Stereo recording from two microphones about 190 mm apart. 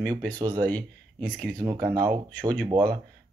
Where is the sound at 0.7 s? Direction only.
10° left (ahead or behind).